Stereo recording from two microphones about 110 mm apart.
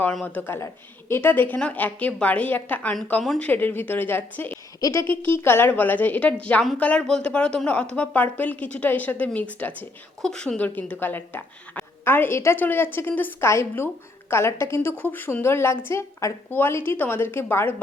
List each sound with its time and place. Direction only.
0.0 s speech: 10° left (ahead or behind)
0.4 s speech: 20° left (ahead or behind)
4.8 s a woman's voice: 30° left (ahead or behind)